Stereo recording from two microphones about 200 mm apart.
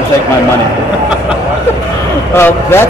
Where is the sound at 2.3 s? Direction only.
10° left (ahead or behind).